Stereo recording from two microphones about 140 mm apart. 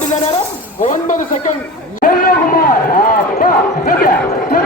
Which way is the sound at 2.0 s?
70° left (ahead or behind).